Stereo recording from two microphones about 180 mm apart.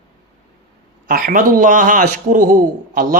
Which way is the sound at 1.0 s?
50° right (ahead or behind).